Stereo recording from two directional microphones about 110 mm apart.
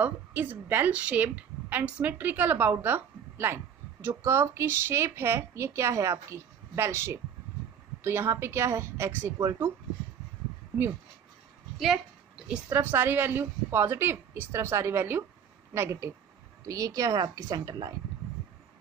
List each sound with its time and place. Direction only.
0.0 s a woman's voice: 15° right (ahead or behind)
12.4 s a woman's voice: 20° right (ahead or behind)